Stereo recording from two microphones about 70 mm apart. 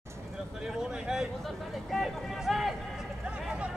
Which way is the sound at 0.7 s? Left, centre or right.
Centre.